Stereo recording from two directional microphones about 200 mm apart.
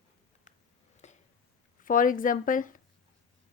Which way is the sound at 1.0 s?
35° left (ahead or behind).